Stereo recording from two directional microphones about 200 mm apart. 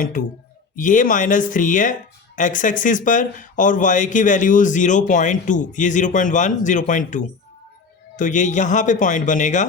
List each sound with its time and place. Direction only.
0.0 s speech: 45° left (ahead or behind)